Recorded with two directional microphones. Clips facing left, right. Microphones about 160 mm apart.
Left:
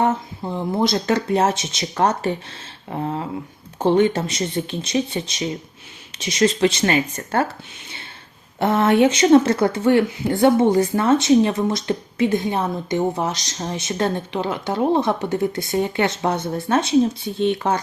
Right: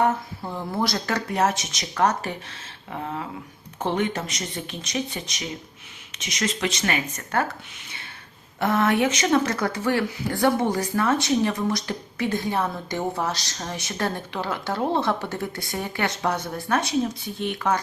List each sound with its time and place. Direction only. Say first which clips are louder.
0.0 s speech: left 2 dB; 20° left (ahead or behind)
8.5 s speech: left 5 dB; 25° left (ahead or behind)